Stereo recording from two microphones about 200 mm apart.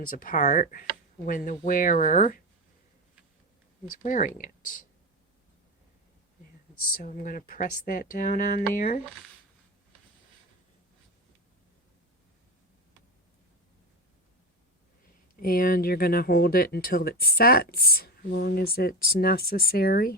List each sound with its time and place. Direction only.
0.1 s speech: 40° left (ahead or behind)
4.0 s speech: 40° left (ahead or behind)
7.0 s speech: 40° left (ahead or behind)
15.4 s speech: 45° left (ahead or behind)